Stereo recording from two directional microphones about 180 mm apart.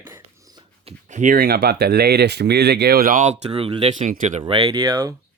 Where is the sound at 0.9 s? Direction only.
45° right (ahead or behind).